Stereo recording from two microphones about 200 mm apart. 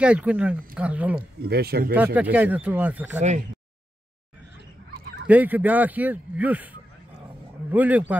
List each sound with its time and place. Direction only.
0.0 s speech: 5° right (ahead or behind)
1.4 s speech: 50° right (ahead or behind)
2.1 s speech: 10° right (ahead or behind)
3.2 s speech: 35° right (ahead or behind)
5.2 s speech: 10° right (ahead or behind)